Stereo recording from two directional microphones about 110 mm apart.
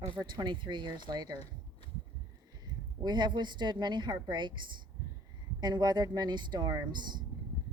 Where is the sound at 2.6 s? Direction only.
40° right (ahead or behind).